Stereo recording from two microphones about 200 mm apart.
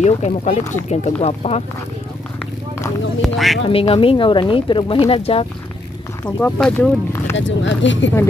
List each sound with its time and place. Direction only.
0.0 s speech: 30° left (ahead or behind)
3.2 s speech: centre (ahead or behind)
3.6 s speech: 30° left (ahead or behind)
6.2 s speech: 5° left (ahead or behind)
7.3 s speech: 70° left (ahead or behind)